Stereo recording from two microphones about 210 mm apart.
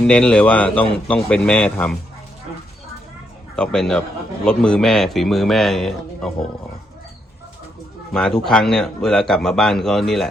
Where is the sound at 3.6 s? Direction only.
5° left (ahead or behind).